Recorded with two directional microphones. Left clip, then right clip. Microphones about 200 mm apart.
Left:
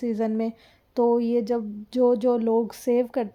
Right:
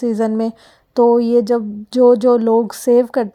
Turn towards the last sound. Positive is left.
turn(degrees=-25)  # may be behind; listen again after turning